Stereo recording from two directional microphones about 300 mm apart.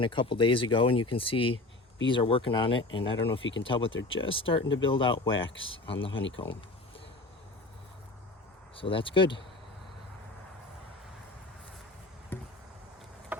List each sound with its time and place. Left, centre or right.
0.0 s speech: centre
6.1 s speech: left
8.7 s speech: centre
12.3 s a sound: centre